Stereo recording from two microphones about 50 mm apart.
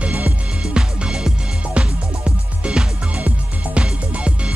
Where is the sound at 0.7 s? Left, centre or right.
Centre.